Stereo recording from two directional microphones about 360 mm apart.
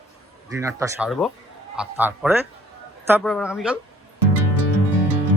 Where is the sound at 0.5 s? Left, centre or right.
Centre.